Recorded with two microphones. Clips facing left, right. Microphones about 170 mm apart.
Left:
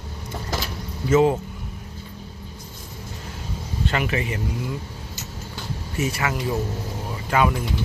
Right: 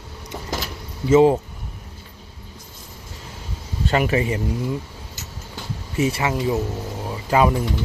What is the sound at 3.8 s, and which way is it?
Speech, 35° right (ahead or behind).